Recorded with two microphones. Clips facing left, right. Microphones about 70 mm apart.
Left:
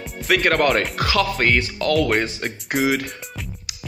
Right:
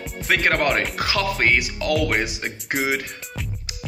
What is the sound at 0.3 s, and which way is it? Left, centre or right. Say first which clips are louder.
Speech: left 2 dB; right.